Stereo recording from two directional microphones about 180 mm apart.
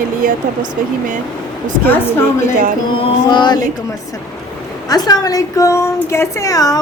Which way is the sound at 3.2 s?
25° left (ahead or behind).